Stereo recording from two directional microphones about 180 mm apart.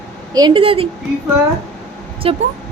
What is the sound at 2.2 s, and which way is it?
Speech, 30° right (ahead or behind).